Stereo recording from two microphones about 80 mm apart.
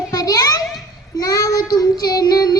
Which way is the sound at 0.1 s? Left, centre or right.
Left.